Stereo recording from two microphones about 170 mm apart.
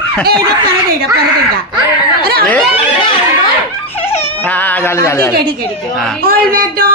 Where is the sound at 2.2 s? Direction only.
65° right (ahead or behind).